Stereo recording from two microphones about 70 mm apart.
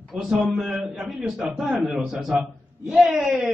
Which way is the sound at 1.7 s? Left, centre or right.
Centre.